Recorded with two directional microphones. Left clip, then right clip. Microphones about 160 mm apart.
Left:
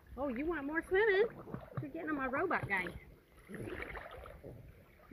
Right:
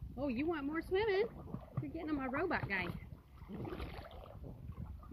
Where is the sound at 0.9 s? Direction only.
5° right (ahead or behind).